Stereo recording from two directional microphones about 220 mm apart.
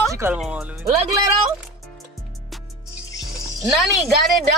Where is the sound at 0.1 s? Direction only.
10° right (ahead or behind).